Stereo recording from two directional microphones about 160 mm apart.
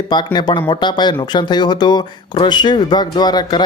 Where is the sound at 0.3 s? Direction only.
25° left (ahead or behind).